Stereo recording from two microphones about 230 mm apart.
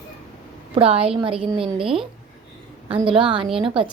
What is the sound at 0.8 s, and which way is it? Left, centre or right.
Speech, right.